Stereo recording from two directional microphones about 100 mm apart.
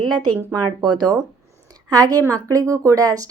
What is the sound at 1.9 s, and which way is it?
Speech, 35° right (ahead or behind).